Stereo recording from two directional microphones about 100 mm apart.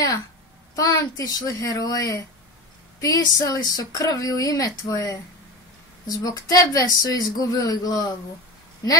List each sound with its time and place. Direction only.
0.7 s speech: 35° left (ahead or behind)